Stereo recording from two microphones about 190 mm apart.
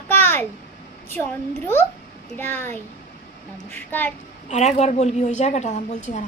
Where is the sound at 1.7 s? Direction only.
10° left (ahead or behind).